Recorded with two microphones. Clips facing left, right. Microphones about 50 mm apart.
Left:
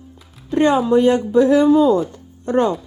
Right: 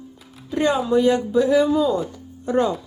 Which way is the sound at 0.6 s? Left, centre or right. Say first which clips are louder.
Left 4 dB; left.